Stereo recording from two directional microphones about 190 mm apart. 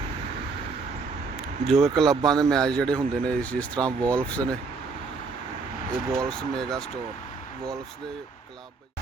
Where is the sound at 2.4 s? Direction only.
5° left (ahead or behind).